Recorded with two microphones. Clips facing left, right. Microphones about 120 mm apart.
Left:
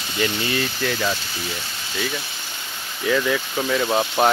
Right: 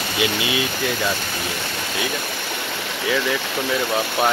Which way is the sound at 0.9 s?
60° right (ahead or behind).